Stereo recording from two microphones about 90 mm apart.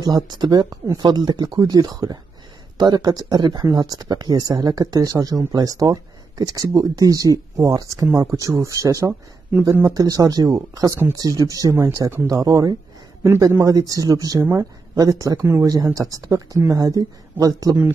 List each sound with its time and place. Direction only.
0.0 s speech: 50° right (ahead or behind)